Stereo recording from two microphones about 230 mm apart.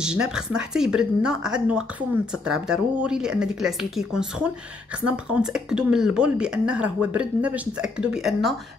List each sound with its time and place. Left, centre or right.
0.0 s speech: centre